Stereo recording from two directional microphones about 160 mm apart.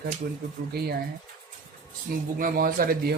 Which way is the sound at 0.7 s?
75° right (ahead or behind).